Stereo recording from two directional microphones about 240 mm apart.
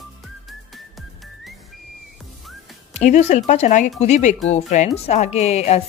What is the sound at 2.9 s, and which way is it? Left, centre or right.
A woman's voice, left.